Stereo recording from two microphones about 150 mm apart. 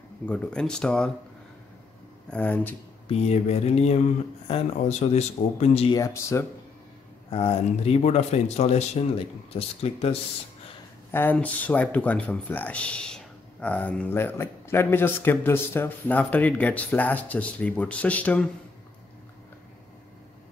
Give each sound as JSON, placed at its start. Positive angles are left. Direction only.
{"t": 0.3, "sound": "speech", "side_deg": 5}
{"t": 2.2, "sound": "speech", "side_deg": 10}
{"t": 3.1, "sound": "speech", "side_deg": 45}
{"t": 5.9, "sound": "speech", "side_deg": 20}
{"t": 7.2, "sound": "speech", "side_deg": 40}
{"t": 11.1, "sound": "speech", "side_deg": 15}